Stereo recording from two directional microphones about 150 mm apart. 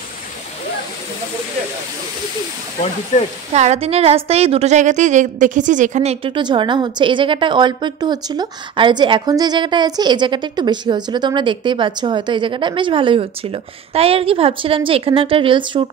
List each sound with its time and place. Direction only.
3.1 s speech: 50° left (ahead or behind)
3.5 s a woman's voice: 45° right (ahead or behind)
6.2 s a woman's voice: 35° right (ahead or behind)